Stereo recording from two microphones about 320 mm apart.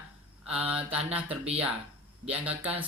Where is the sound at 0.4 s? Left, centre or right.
Centre.